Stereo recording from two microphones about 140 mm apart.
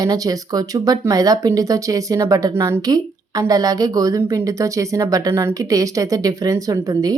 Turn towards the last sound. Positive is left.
turn(degrees=-25)  # may be behind; listen again after turning